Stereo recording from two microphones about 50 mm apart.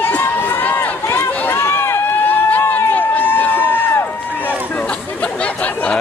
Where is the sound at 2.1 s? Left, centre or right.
Left.